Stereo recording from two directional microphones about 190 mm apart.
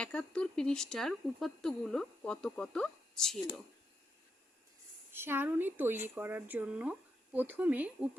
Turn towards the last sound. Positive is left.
turn(degrees=-10)  # may be behind; listen again after turning